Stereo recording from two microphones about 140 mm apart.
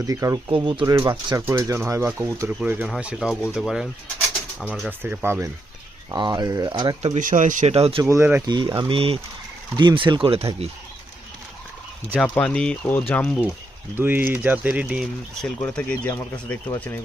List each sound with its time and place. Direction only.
0.0 s speech: 25° right (ahead or behind)
0.5 s speech: 35° right (ahead or behind); by 5.5 s 15° right (ahead or behind)
6.1 s speech: 30° right (ahead or behind)
7.0 s speech: 60° right (ahead or behind)
7.7 s speech: 45° right (ahead or behind)
8.0 s speech: 15° right (ahead or behind)
8.4 s speech: 35° right (ahead or behind)
12.1 s speech: 10° left (ahead or behind)
13.9 s speech: 15° right (ahead or behind)
15.4 s speech: 5° left (ahead or behind)